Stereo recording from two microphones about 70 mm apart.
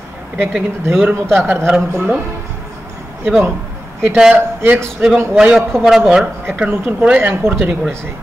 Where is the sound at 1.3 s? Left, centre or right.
Right.